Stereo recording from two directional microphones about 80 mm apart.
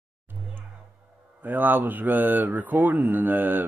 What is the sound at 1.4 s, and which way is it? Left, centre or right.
Speech, right.